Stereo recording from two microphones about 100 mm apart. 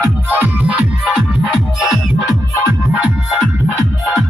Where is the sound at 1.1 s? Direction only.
5° right (ahead or behind).